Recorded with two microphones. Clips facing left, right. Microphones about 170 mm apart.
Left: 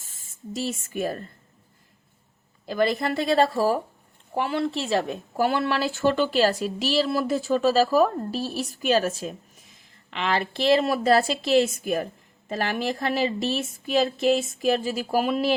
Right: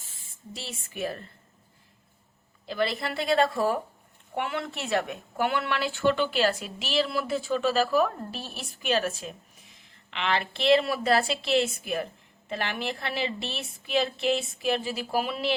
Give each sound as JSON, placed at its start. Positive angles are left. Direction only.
{"t": 0.1, "sound": "speech", "side_deg": 45}
{"t": 2.6, "sound": "a woman's voice", "side_deg": 45}